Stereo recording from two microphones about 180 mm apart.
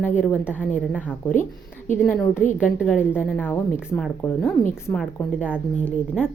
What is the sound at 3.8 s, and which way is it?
A woman's voice, centre (ahead or behind).